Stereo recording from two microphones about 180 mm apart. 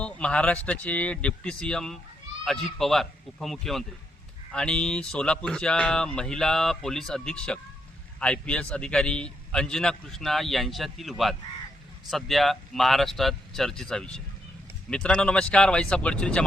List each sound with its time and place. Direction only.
0.0 s a man's voice: 5° left (ahead or behind)